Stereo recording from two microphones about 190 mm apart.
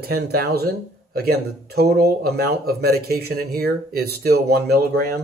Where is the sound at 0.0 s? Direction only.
55° right (ahead or behind).